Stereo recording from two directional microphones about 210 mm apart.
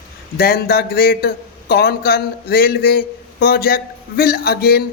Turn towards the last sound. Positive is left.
turn(degrees=50)  # may be behind; listen again after turning